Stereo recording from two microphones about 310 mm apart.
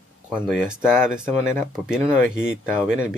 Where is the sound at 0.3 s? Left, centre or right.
Centre.